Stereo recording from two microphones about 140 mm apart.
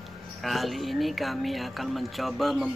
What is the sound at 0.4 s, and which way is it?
Speech, centre (ahead or behind).